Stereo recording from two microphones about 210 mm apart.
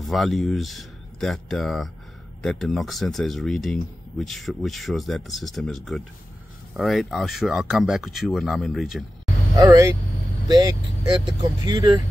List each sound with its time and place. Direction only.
0.0 s speech: centre (ahead or behind)
9.6 s speech: 15° right (ahead or behind)
11.1 s speech: 20° right (ahead or behind)